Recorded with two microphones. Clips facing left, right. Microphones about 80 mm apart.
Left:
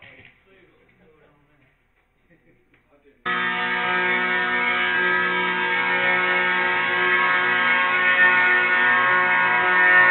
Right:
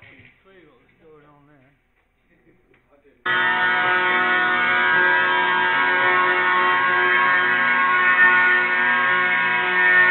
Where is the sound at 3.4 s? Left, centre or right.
Right.